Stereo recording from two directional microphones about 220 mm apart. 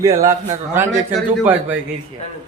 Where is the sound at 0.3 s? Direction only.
10° right (ahead or behind).